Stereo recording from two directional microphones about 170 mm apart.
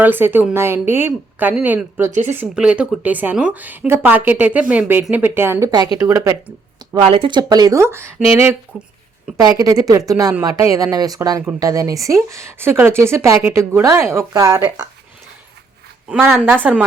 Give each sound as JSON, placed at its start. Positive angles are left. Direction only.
{"t": 0.0, "sound": "a woman's voice", "side_deg": -10}
{"t": 7.0, "sound": "speech", "side_deg": -30}
{"t": 9.4, "sound": "a woman's voice", "side_deg": -20}
{"t": 16.0, "sound": "a woman's voice", "side_deg": -5}